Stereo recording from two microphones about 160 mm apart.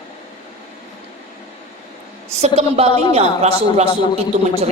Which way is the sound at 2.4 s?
40° right (ahead or behind).